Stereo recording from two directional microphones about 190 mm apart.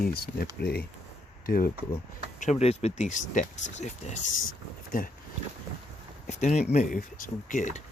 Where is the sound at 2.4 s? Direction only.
35° left (ahead or behind).